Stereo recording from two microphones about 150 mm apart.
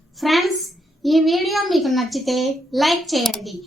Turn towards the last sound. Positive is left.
turn(degrees=0)  # may be behind; listen again after turning